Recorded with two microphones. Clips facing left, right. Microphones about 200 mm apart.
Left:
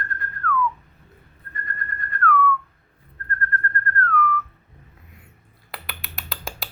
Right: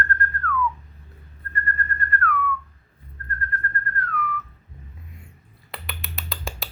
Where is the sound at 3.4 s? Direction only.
5° right (ahead or behind).